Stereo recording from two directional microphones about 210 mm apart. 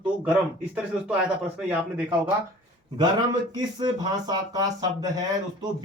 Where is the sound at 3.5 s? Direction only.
20° right (ahead or behind).